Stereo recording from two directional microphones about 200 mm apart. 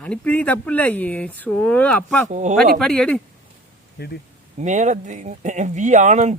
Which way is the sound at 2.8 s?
5° left (ahead or behind).